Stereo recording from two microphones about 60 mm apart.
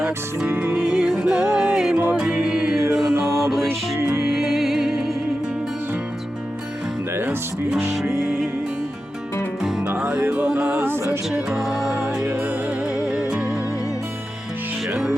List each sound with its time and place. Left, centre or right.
0.0 s music: centre
0.5 s music: right
0.8 s music: centre
2.8 s mantra: right
3.7 s music: right
4.4 s music: centre
8.2 s music: centre
10.0 s music: centre
11.3 s music: centre
13.1 s music: centre